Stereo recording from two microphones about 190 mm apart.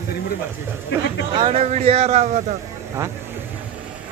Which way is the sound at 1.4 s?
35° right (ahead or behind).